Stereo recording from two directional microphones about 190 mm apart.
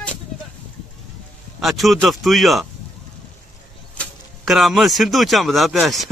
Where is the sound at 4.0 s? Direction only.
Centre (ahead or behind).